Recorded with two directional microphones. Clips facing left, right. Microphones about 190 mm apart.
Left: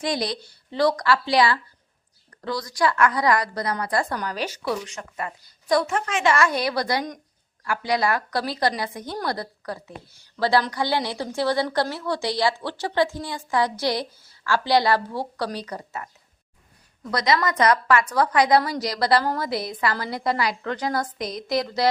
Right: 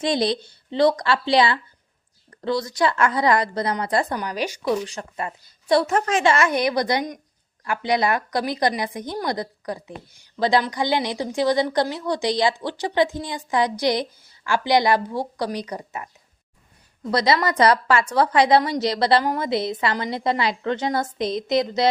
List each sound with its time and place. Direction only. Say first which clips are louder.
0.0 s a woman's voice: right 5 dB; 25° right (ahead or behind)
4.2 s a woman's voice: right 2 dB; 15° right (ahead or behind)
4.9 s a woman's voice: right 2 dB; 30° right (ahead or behind)
5.8 s a woman's voice: right 3 dB; 40° right (ahead or behind)
6.3 s a woman's voice: right 2 dB; 20° right (ahead or behind)
17.0 s a woman's voice: right 2 dB; 30° right (ahead or behind)